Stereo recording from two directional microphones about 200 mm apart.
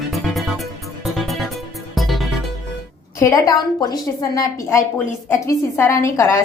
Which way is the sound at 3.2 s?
15° left (ahead or behind).